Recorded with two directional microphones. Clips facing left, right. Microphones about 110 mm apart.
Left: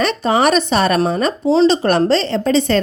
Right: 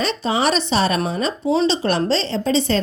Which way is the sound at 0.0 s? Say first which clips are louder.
Left 5 dB; 55° left (ahead or behind).